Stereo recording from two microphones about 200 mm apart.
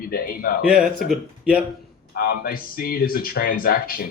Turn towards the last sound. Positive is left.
turn(degrees=45)  # may be behind; listen again after turning